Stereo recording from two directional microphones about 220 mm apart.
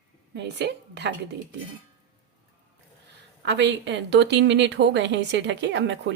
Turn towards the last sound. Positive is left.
turn(degrees=-55)  # may be behind; listen again after turning